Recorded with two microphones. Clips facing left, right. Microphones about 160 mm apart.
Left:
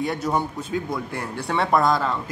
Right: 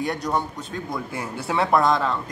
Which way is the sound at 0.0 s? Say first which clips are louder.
Left 1 dB; centre (ahead or behind).